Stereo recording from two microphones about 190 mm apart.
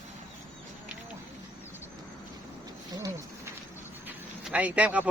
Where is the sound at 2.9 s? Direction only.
20° right (ahead or behind).